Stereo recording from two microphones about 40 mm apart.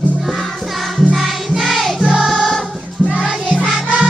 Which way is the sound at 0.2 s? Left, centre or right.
Centre.